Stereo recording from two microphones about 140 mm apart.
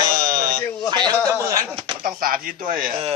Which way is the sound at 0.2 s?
90° right.